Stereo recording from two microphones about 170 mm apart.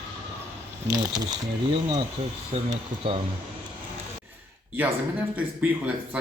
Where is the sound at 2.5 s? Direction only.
35° right (ahead or behind).